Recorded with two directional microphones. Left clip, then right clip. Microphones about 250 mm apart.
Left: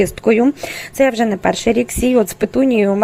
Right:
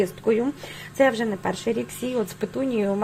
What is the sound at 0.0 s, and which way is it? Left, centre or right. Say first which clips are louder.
Speech: left 9 dB; left.